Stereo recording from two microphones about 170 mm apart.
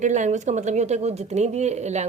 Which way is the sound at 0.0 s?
45° right (ahead or behind).